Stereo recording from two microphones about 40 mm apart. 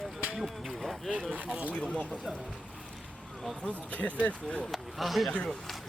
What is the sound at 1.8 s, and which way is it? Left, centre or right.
Speech, left.